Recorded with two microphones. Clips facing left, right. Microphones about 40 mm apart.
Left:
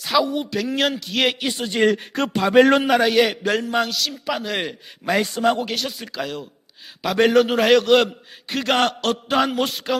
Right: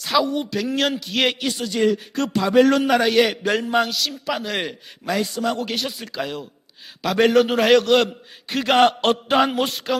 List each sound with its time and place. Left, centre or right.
0.0 s a man's voice: centre
1.5 s a man's voice: left
2.6 s a man's voice: left
2.8 s a man's voice: centre
5.1 s a man's voice: left
5.6 s a man's voice: centre
8.9 s chant: right
9.3 s a man's voice: centre